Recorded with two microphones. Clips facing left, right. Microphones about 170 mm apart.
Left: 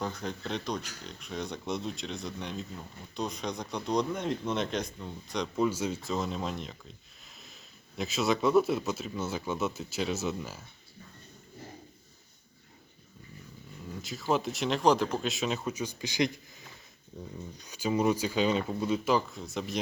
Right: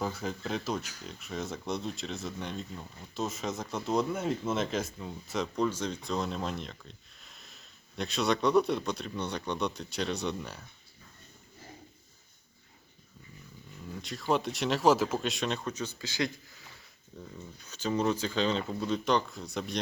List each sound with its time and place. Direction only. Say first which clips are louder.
0.0 s speech: right 1 dB; 5° right (ahead or behind)
5.6 s speech: left 2 dB; 10° left (ahead or behind)
14.0 s speech: even; centre (ahead or behind)